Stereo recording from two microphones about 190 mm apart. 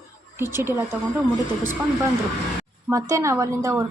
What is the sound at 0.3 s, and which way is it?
Speech, 10° right (ahead or behind).